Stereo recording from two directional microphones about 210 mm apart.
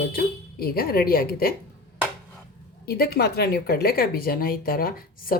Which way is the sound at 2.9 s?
45° left (ahead or behind).